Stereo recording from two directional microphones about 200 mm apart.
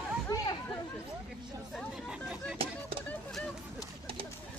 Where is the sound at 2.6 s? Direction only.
30° right (ahead or behind).